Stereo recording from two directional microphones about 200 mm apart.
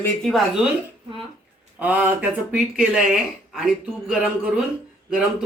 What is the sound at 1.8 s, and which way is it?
Speech, 10° right (ahead or behind).